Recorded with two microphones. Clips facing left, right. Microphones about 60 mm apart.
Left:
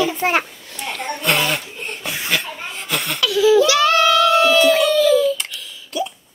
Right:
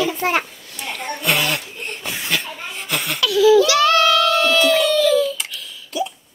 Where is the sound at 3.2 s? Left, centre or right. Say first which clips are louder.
Right 1 dB; left.